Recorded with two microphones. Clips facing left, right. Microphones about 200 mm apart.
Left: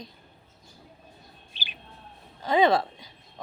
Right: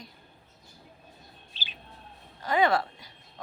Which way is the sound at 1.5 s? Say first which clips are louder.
Left 2 dB; 15° left (ahead or behind).